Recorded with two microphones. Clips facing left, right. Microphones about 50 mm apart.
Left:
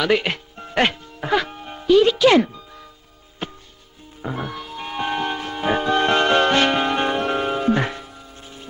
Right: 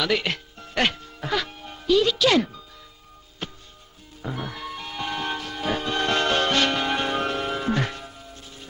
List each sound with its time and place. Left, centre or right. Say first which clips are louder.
0.0 s speech: left 5 dB; left
3.4 s music: left 4 dB; left